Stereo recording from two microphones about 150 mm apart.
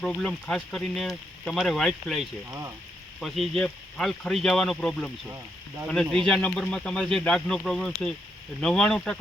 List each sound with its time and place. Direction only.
0.0 s speech: 5° left (ahead or behind)
2.5 s speech: 20° right (ahead or behind)
3.2 s speech: centre (ahead or behind)
6.1 s speech: 5° left (ahead or behind)